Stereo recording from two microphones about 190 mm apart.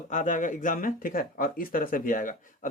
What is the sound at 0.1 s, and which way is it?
Speech, 40° left (ahead or behind).